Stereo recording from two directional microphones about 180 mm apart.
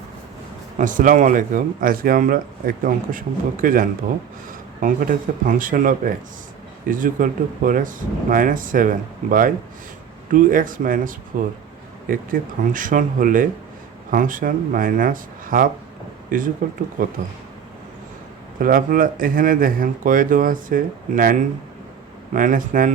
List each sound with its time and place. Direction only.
0.8 s speech: 45° right (ahead or behind)
18.6 s speech: 50° right (ahead or behind)